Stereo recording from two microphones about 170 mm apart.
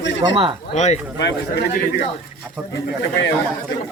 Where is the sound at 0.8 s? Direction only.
40° left (ahead or behind).